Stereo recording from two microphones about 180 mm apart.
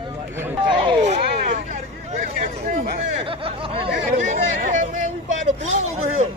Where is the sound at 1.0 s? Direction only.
45° right (ahead or behind).